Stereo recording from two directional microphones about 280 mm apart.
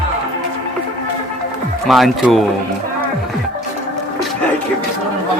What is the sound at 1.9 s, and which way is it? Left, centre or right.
Speech, centre.